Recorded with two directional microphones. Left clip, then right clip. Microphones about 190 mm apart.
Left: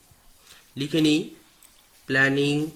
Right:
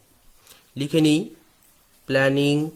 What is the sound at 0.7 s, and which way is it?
Speech, 55° right (ahead or behind).